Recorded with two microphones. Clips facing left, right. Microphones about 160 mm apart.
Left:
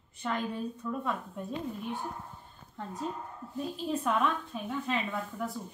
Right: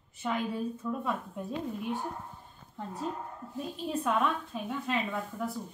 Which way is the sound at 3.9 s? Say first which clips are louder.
Even; centre (ahead or behind).